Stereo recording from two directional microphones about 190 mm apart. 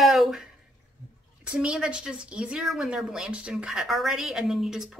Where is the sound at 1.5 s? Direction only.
5° right (ahead or behind).